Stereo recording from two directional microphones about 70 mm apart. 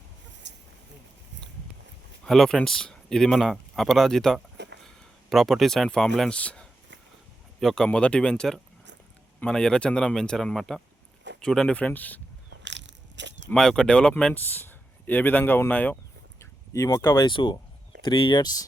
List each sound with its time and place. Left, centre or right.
2.2 s speech: centre
7.6 s speech: centre
7.9 s speech: centre
13.5 s speech: centre
14.3 s speech: left
16.4 s a sound: left
17.2 s speech: left